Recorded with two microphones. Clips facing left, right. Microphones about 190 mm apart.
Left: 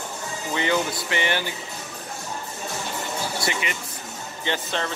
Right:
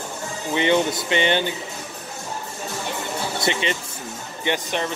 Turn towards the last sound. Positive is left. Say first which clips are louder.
# right 3 dB
turn(degrees=-15)  # may be behind; listen again after turning